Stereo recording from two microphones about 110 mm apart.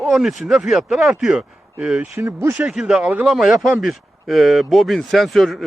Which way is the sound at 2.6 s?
5° right (ahead or behind).